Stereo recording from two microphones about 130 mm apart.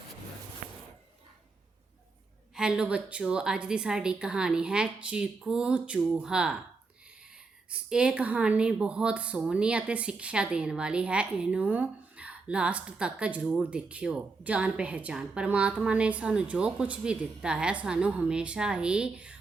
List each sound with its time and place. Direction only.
0.6 s a sound: 75° right (ahead or behind)
2.6 s a woman's voice: 5° right (ahead or behind)
7.7 s a woman's voice: 5° right (ahead or behind)